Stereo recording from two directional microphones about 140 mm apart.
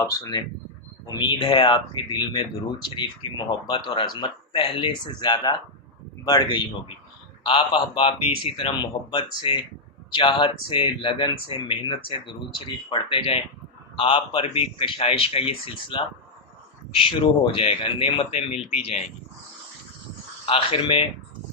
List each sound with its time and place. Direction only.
0.0 s a man's voice: 25° left (ahead or behind); by 18.9 s 50° left (ahead or behind)
20.4 s speech: 40° left (ahead or behind)